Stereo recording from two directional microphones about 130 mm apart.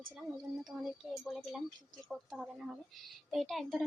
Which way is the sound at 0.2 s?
5° right (ahead or behind).